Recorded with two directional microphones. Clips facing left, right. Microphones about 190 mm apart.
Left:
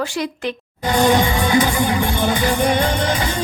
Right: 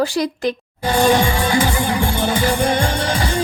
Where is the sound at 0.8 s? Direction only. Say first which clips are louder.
Even; 20° left (ahead or behind).